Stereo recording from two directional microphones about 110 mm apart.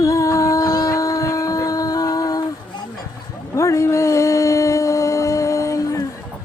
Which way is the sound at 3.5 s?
30° left (ahead or behind).